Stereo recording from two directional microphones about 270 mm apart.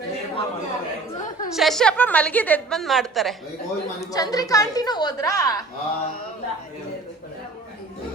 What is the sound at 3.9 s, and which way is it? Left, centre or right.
A woman's voice, centre.